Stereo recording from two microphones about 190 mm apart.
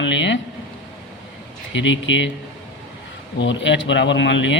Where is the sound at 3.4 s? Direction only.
70° left (ahead or behind).